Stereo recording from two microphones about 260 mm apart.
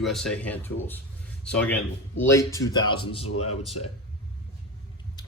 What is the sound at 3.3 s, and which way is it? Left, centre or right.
Speech, left.